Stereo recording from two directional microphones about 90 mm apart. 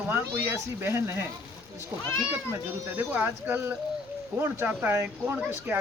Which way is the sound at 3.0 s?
20° right (ahead or behind).